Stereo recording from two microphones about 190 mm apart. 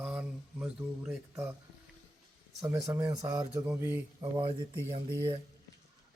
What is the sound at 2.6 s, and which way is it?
Speech, 15° right (ahead or behind).